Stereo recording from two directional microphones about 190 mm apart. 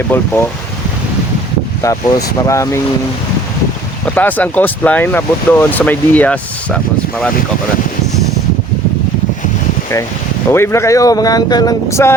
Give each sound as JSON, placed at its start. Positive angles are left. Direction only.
{"t": 0.1, "sound": "speech", "side_deg": 10}
{"t": 1.8, "sound": "speech", "side_deg": 15}
{"t": 4.0, "sound": "speech", "side_deg": 10}
{"t": 10.5, "sound": "speech", "side_deg": 15}